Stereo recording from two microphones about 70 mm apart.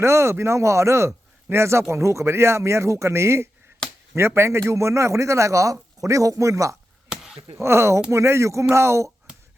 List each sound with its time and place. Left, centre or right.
0.0 s a man's voice: right